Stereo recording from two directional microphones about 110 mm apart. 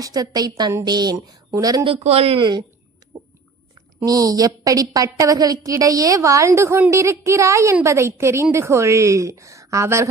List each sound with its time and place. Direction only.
0.0 s a woman's voice: 35° right (ahead or behind)
2.0 s speech: 65° right (ahead or behind)
2.4 s a woman's voice: 40° right (ahead or behind)
3.1 s a sound: 35° right (ahead or behind)
4.0 s a woman's voice: 35° right (ahead or behind)